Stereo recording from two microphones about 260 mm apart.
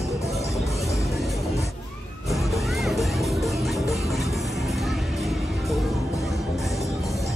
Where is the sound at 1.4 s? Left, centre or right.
Centre.